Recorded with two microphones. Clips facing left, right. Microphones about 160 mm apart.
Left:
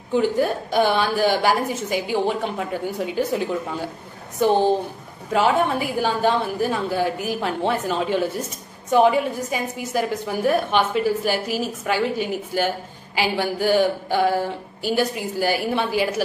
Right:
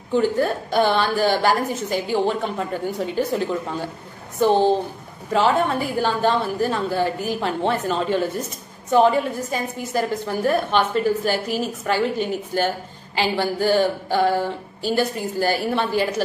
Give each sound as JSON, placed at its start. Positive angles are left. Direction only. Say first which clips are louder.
{"t": 0.1, "sound": "a woman's voice", "louder": "even", "side_deg": 10}